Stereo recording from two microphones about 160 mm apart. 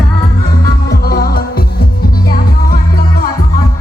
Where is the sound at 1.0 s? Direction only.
70° left (ahead or behind).